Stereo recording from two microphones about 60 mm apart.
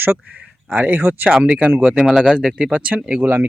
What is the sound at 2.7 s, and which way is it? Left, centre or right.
Speech, right.